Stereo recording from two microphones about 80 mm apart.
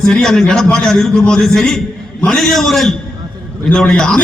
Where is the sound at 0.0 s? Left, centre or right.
Centre.